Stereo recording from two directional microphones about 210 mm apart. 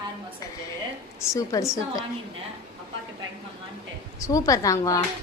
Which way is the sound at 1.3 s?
15° left (ahead or behind).